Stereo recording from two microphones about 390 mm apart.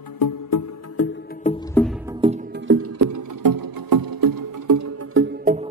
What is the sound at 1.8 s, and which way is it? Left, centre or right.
Music, centre.